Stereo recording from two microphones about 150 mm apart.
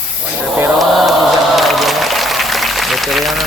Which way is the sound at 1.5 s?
Centre (ahead or behind).